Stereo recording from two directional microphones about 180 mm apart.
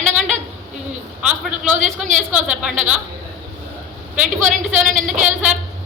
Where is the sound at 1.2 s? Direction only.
5° right (ahead or behind).